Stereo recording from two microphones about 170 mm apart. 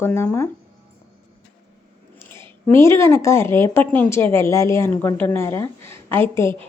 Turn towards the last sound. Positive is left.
turn(degrees=15)  # may be behind; listen again after turning